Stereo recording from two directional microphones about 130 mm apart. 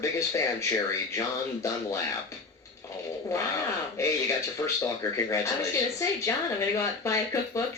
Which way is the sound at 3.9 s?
20° left (ahead or behind).